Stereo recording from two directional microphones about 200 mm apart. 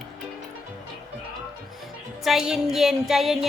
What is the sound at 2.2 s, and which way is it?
Music, centre (ahead or behind).